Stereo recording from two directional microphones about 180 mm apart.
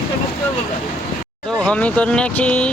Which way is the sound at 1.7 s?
5° left (ahead or behind).